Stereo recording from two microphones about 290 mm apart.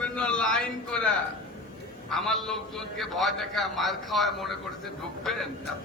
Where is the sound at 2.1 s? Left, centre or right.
Centre.